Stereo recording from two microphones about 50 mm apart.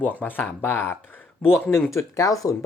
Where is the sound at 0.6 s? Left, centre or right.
Left.